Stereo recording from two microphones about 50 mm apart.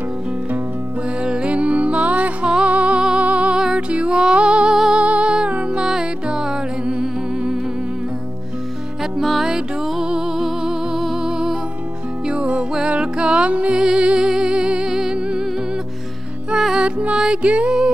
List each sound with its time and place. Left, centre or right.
1.2 s music: centre
5.9 s music: centre
9.2 s music: centre
12.3 s music: right
16.7 s music: centre